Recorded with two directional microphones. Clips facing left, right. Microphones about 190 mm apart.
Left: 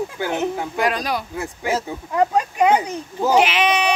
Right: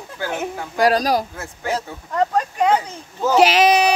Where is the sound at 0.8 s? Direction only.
35° right (ahead or behind).